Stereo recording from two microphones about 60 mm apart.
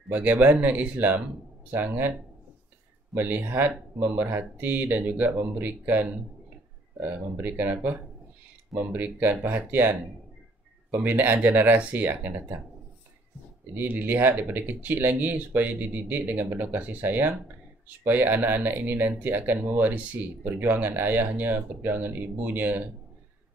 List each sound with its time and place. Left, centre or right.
0.1 s speech: right
3.2 s speech: right
13.7 s speech: right